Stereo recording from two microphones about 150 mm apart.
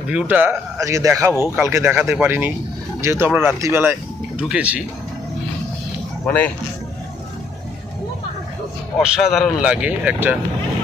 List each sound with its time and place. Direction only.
0.1 s speech: 10° right (ahead or behind)
6.2 s speech: 10° left (ahead or behind)
9.0 s speech: 5° right (ahead or behind)